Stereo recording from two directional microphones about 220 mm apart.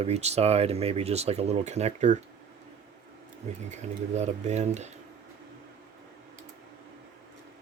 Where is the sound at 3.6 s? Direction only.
30° right (ahead or behind).